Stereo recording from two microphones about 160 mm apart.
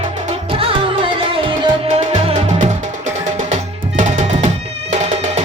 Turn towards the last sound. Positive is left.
turn(degrees=-45)  # may be behind; listen again after turning